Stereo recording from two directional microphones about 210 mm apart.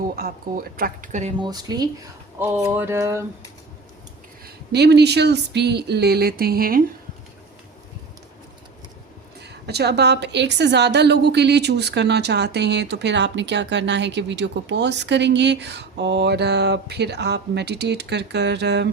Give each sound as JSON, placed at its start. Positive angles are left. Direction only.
{"t": 0.2, "sound": "a woman's voice", "side_deg": -45}
{"t": 1.4, "sound": "speech", "side_deg": -20}
{"t": 2.4, "sound": "a sound", "side_deg": -10}
{"t": 4.4, "sound": "a woman's voice", "side_deg": -50}
{"t": 9.4, "sound": "a woman's voice", "side_deg": -50}